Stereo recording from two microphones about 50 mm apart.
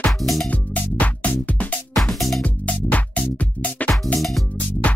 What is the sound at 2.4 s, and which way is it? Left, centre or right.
Music, left.